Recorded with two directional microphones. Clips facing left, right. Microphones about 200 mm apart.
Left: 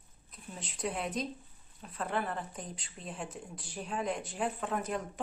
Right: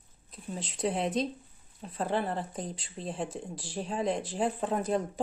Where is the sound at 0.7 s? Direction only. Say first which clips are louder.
Right 6 dB; 30° right (ahead or behind).